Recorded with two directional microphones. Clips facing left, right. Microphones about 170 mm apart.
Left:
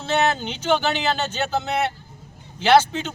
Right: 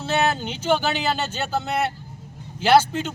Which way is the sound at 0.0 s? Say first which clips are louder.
Left 1 dB; 10° right (ahead or behind).